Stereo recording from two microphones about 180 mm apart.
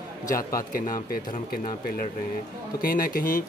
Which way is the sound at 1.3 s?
45° left (ahead or behind).